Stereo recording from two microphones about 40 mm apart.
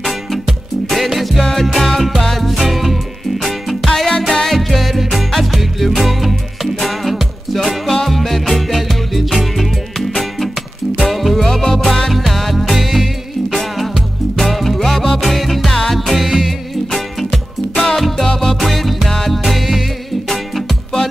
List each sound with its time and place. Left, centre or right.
0.0 s music: centre
16.2 s music: centre
18.3 s music: centre
18.6 s music: centre